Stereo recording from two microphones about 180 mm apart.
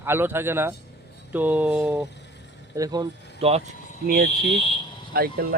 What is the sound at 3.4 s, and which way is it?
Speech, 35° right (ahead or behind).